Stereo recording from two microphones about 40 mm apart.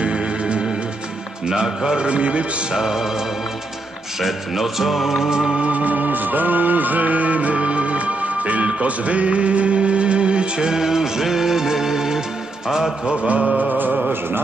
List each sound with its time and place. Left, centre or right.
0.0 s music: right
2.0 s music: right
2.8 s music: centre
4.2 s music: centre
5.6 s music: right; by 12.9 s centre
13.0 s music: right
13.3 s music: right